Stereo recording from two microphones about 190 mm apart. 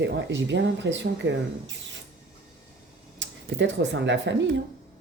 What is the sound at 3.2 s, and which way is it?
Speech, 75° right (ahead or behind).